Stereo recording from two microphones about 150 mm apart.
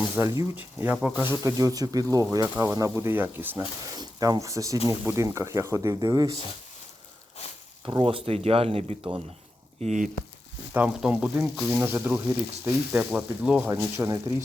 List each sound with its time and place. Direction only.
0.2 s speech: 15° right (ahead or behind)
3.9 s speech: 25° right (ahead or behind)
8.0 s speech: 40° right (ahead or behind)
9.8 s speech: 55° right (ahead or behind)
10.8 s speech: 5° right (ahead or behind)